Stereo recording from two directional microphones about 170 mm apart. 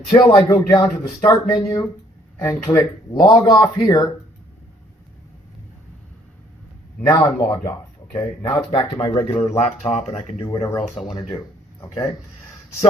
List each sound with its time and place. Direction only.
0.1 s speech: 30° left (ahead or behind)
7.1 s speech: 20° left (ahead or behind)
9.2 s speech: 40° left (ahead or behind)
10.4 s speech: 25° left (ahead or behind)
10.9 s speech: centre (ahead or behind)